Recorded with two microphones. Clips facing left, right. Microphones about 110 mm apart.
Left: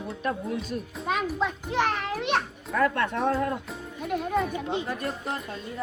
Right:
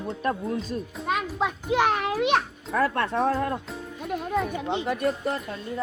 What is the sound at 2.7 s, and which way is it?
Speech, 35° right (ahead or behind).